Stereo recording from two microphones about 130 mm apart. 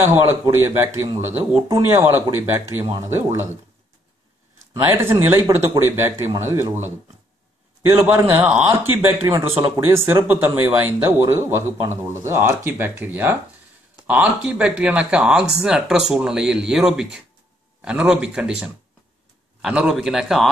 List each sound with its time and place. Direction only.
0.0 s a man's voice: 15° right (ahead or behind)
5.3 s a man's voice: 20° right (ahead or behind)